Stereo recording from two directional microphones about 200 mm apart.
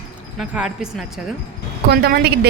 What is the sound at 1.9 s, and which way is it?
Speech, 55° right (ahead or behind).